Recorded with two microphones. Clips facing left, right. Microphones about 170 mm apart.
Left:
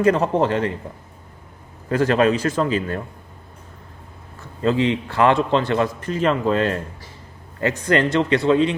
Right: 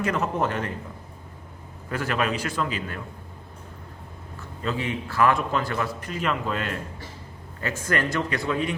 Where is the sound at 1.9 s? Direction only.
35° left (ahead or behind).